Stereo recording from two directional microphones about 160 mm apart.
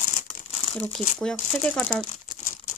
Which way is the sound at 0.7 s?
5° left (ahead or behind).